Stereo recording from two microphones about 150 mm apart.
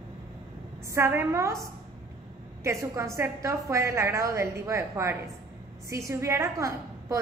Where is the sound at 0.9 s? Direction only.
15° right (ahead or behind).